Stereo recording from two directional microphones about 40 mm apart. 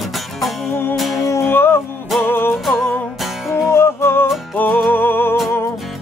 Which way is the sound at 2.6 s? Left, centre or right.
Centre.